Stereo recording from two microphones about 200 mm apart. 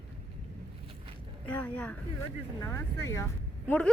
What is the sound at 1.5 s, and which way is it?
Speech, 5° left (ahead or behind).